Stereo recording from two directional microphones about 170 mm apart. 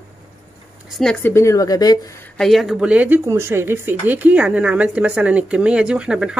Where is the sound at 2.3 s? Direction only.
Centre (ahead or behind).